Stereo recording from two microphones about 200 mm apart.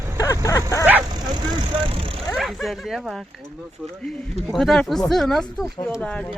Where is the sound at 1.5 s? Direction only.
25° right (ahead or behind).